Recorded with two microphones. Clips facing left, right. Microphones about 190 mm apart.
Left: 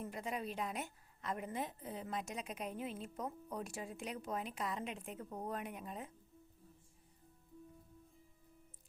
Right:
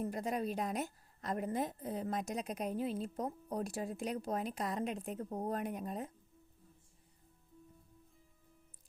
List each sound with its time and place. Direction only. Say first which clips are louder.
0.0 s a woman's voice: right 6 dB; 40° right (ahead or behind)